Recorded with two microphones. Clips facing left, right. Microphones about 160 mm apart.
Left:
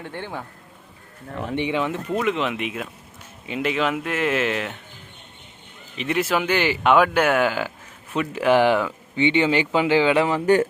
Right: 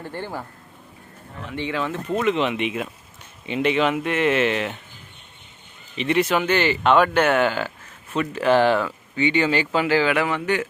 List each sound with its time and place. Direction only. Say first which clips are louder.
0.0 s speech: right 1 dB; 5° right (ahead or behind)
1.5 s speech: left 2 dB; 15° left (ahead or behind)
2.1 s speech: right 3 dB; centre (ahead or behind)
6.0 s speech: right 2 dB; 5° left (ahead or behind); by 10.4 s 30° left (ahead or behind)
10.4 s speech: left 6 dB; 45° left (ahead or behind)